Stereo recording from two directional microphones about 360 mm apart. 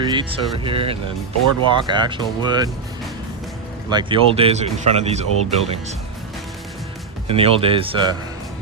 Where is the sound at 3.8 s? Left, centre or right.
Centre.